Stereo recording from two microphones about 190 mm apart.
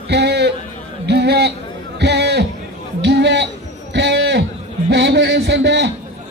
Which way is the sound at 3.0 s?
65° right (ahead or behind).